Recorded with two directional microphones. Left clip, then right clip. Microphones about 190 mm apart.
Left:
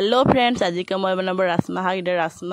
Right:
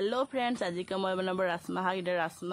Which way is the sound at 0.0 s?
50° left (ahead or behind).